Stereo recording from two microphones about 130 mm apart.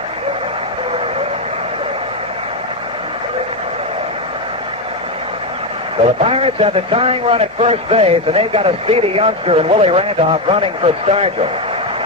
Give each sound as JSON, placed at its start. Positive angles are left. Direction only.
{"t": 6.2, "sound": "a man's voice", "side_deg": -45}